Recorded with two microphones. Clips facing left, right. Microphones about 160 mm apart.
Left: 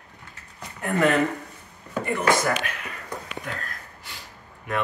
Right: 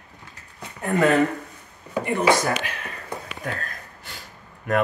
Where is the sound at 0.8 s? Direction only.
20° right (ahead or behind).